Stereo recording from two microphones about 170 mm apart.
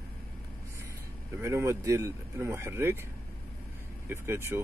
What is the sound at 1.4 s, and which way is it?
Speech, 15° right (ahead or behind).